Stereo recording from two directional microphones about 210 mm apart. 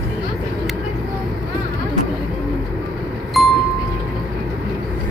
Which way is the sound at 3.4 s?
Centre (ahead or behind).